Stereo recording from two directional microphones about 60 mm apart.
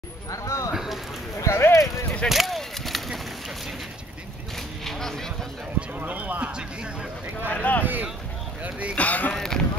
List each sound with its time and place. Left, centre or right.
0.3 s speech: left
1.4 s a sound: left
2.2 s a sound: centre
4.8 s speech: centre
5.8 s speech: right
6.5 s speech: centre
7.4 s speech: left
7.8 s speech: right
8.9 s speech: left
9.3 s speech: centre